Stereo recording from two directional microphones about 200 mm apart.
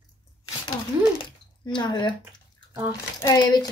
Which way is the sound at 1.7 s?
20° left (ahead or behind).